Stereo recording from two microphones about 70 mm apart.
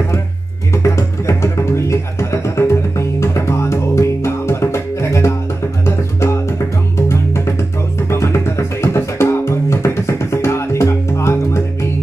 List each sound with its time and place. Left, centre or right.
0.8 s music: left